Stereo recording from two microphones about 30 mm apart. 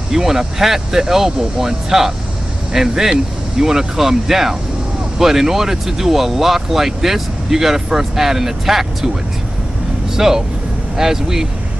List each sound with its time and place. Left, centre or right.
0.1 s speech: centre
10.1 s speech: centre